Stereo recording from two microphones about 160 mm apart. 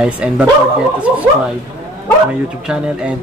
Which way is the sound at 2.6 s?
5° right (ahead or behind).